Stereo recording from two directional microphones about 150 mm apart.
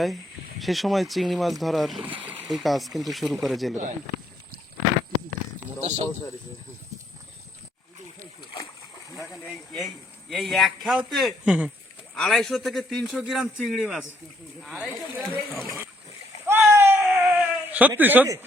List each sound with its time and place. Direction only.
0.6 s a man's voice: centre (ahead or behind)
2.0 s a sound: 10° right (ahead or behind)
2.5 s a man's voice: centre (ahead or behind)
5.8 s speech: 40° right (ahead or behind)
10.2 s a man's voice: centre (ahead or behind)
16.5 s splash: 15° right (ahead or behind)
17.0 s baby cry: 10° right (ahead or behind)